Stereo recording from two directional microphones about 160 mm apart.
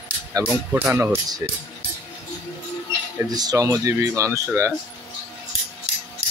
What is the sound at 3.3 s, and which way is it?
Speech, 25° right (ahead or behind).